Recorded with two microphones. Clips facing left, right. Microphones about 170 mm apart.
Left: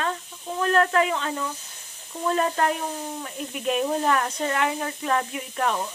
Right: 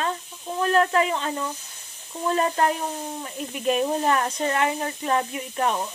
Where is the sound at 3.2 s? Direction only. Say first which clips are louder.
Right 4 dB; centre (ahead or behind).